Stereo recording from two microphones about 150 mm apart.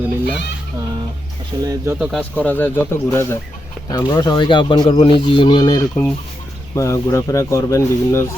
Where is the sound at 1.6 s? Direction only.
25° right (ahead or behind).